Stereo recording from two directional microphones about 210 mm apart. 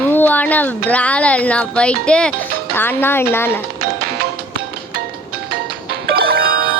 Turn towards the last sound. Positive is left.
turn(degrees=-45)  # may be behind; listen again after turning